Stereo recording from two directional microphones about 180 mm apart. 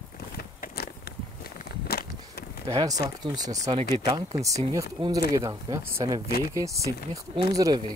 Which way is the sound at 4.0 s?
30° right (ahead or behind).